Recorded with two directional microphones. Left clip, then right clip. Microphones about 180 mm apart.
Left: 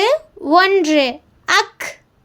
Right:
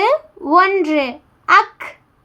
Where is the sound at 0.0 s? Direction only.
15° left (ahead or behind).